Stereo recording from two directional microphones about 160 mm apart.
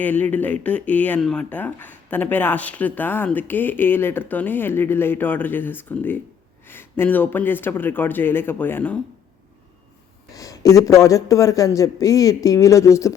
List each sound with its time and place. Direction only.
0.0 s speech: 10° left (ahead or behind)
10.3 s a man's voice: 20° left (ahead or behind)